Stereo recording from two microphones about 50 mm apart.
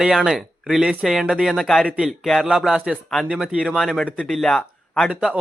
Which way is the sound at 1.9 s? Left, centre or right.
Centre.